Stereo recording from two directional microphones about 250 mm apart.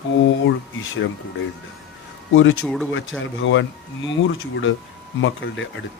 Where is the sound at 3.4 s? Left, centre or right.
Left.